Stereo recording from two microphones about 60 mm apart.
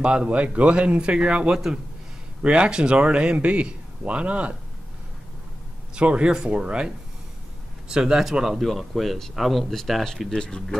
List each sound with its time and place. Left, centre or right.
0.0 s speech: centre
5.9 s speech: centre
7.9 s speech: centre
10.3 s speech: centre